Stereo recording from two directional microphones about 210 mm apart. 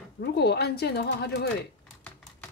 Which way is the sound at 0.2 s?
50° left (ahead or behind).